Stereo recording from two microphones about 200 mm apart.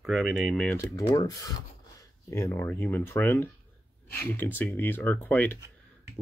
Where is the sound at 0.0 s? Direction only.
Centre (ahead or behind); by 1.3 s 15° left (ahead or behind).